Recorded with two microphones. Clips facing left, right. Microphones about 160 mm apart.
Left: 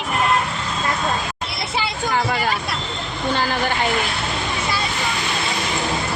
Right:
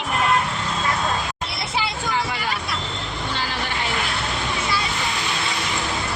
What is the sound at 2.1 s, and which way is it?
Hubbub, 50° left (ahead or behind).